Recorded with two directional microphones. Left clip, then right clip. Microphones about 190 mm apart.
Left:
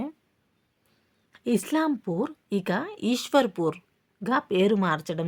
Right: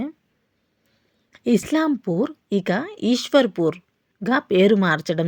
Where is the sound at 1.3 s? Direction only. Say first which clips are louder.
Right 5 dB; 20° right (ahead or behind).